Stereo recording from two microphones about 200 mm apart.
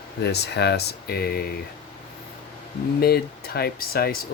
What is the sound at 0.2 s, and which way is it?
Speech, 55° left (ahead or behind).